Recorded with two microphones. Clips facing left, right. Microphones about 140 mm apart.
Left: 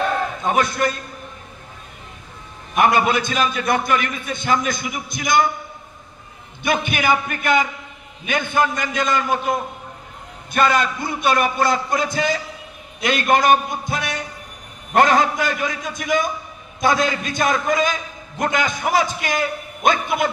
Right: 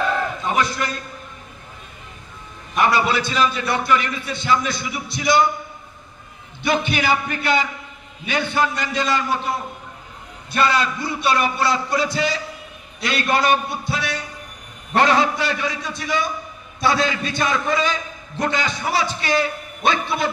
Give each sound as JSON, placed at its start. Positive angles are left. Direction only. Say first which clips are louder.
{"t": 2.7, "sound": "a man's voice", "louder": "left 2 dB", "side_deg": 50}
{"t": 6.6, "sound": "a man's voice", "louder": "even", "side_deg": 50}